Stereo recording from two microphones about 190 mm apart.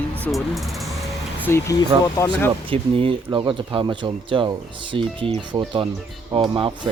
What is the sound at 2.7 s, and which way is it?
Speech, 30° right (ahead or behind).